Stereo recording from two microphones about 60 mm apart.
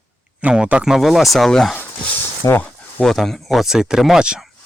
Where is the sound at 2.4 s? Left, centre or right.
Left.